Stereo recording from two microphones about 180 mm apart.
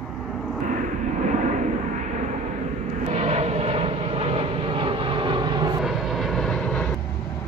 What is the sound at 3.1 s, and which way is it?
Vehicle, 35° right (ahead or behind).